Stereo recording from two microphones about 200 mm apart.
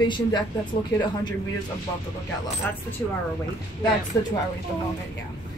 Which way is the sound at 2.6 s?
10° left (ahead or behind).